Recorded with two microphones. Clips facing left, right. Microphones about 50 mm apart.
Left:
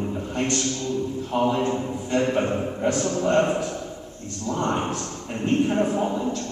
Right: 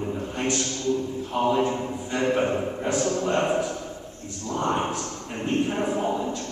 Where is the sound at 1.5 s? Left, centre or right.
Centre.